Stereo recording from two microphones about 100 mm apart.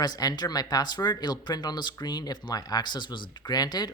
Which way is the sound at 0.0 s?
40° left (ahead or behind).